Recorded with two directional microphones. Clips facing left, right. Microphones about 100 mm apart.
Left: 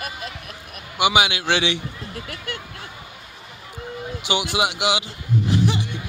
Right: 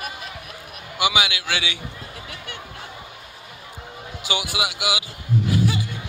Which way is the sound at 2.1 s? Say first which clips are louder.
Left 4 dB; 50° left (ahead or behind).